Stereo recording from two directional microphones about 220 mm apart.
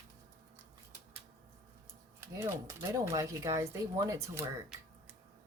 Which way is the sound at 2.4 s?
15° right (ahead or behind).